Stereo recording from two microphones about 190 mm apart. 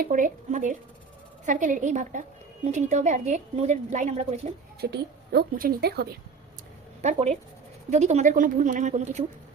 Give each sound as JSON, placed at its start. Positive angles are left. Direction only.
{"t": 0.0, "sound": "a woman's voice", "side_deg": -45}
{"t": 4.8, "sound": "a woman's voice", "side_deg": -55}
{"t": 7.0, "sound": "a woman's voice", "side_deg": -35}